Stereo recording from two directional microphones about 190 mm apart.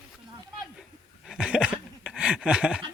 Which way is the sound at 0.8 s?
Centre (ahead or behind).